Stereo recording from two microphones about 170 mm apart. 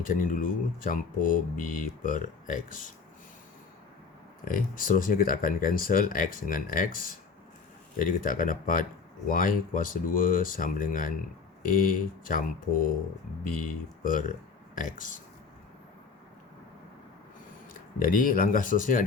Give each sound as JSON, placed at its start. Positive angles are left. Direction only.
{"t": 0.0, "sound": "speech", "side_deg": 50}
{"t": 4.4, "sound": "speech", "side_deg": 55}
{"t": 18.0, "sound": "speech", "side_deg": 55}